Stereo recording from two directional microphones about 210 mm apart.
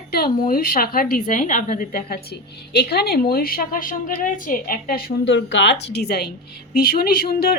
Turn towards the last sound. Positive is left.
turn(degrees=45)  # may be behind; listen again after turning